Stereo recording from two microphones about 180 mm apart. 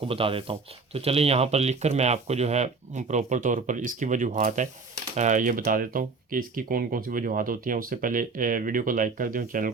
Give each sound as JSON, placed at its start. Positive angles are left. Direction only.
{"t": 0.1, "sound": "speech", "side_deg": -30}